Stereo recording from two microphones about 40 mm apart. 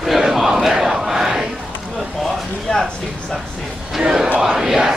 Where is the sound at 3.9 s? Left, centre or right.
Centre.